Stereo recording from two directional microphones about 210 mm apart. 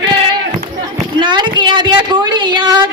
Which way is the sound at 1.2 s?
20° right (ahead or behind).